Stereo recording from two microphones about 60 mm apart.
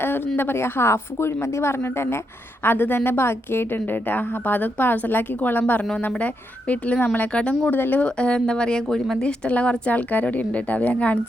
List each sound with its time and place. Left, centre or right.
0.3 s a woman's voice: left
7.6 s a woman's voice: left
8.0 s speech: centre
9.2 s speech: left